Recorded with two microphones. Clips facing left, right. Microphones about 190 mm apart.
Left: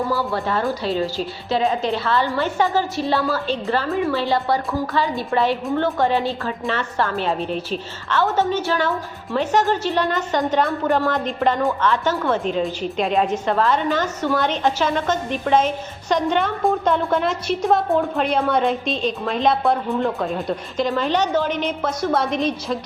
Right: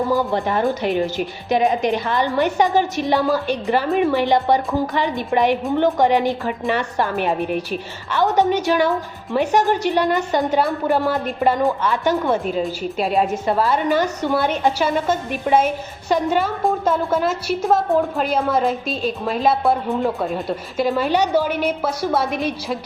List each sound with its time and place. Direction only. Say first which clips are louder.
0.1 s a woman's voice: right 3 dB; 15° right (ahead or behind)